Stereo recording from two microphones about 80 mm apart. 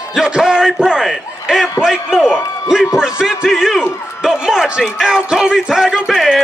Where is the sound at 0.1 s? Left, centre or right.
Centre.